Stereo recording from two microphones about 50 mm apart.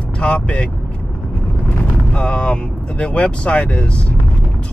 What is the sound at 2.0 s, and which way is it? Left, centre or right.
Speech, centre.